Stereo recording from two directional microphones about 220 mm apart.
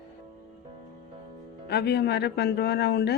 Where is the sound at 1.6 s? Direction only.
50° left (ahead or behind).